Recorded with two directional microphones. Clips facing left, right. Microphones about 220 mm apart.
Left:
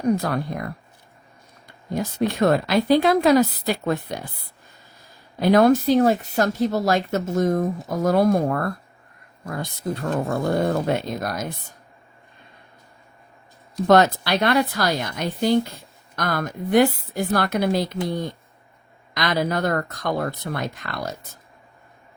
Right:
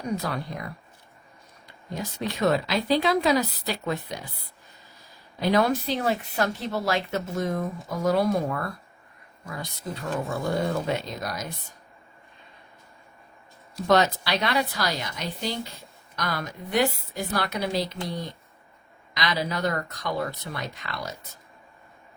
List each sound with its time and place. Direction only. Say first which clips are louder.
0.1 s speech: left 7 dB; 50° left (ahead or behind)
1.9 s speech: left 8 dB; 50° left (ahead or behind)
5.4 s speech: left 7 dB; 50° left (ahead or behind)
13.8 s speech: left 5 dB; 50° left (ahead or behind)